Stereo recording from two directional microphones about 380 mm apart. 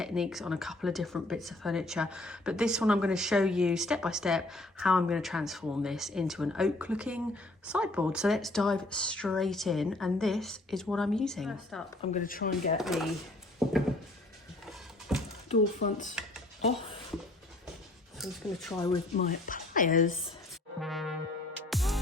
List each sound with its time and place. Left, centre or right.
0.0 s speech: centre
12.1 s speech: left
12.7 s speech: centre
15.1 s a sound: centre
15.4 s speech: centre
18.2 s speech: centre
18.9 s speech: centre
20.8 s music: centre